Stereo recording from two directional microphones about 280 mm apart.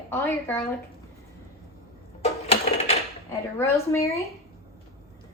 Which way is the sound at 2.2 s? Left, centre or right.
Left.